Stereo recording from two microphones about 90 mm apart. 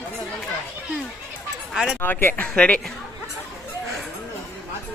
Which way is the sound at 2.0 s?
20° left (ahead or behind).